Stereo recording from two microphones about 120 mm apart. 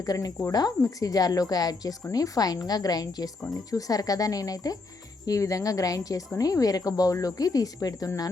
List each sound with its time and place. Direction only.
0.0 s a woman's voice: 30° left (ahead or behind)